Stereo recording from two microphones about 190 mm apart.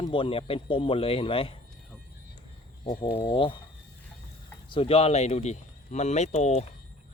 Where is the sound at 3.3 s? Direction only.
25° left (ahead or behind).